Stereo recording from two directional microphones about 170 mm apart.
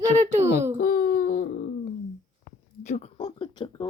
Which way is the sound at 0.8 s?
55° left (ahead or behind).